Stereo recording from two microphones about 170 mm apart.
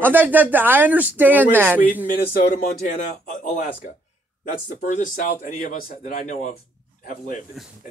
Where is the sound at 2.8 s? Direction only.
55° left (ahead or behind).